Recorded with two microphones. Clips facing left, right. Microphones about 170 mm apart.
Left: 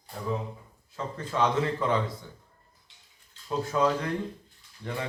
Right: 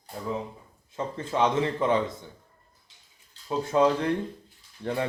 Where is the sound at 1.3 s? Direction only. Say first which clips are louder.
Right 2 dB; 25° right (ahead or behind).